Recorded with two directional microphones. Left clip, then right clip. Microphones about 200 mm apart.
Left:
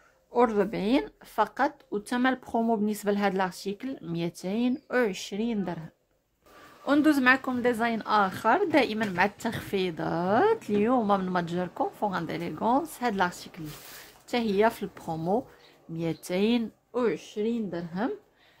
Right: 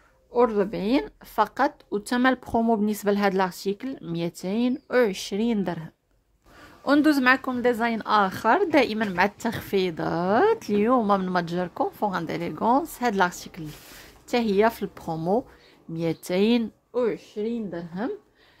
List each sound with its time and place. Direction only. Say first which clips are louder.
0.3 s speech: right 2 dB; 5° right (ahead or behind)
16.9 s a woman's voice: right 2 dB; 5° right (ahead or behind)